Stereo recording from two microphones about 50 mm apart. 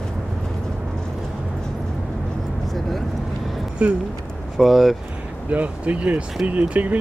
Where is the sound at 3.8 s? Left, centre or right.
Right.